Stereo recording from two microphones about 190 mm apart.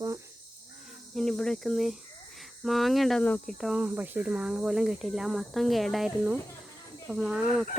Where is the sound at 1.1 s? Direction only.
Centre (ahead or behind).